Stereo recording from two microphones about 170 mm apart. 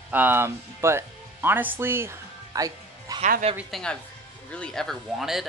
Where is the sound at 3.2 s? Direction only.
45° right (ahead or behind).